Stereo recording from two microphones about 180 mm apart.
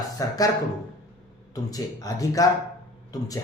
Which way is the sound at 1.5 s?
20° left (ahead or behind).